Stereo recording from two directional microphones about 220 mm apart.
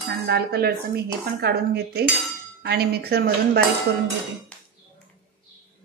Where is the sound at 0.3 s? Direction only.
45° right (ahead or behind).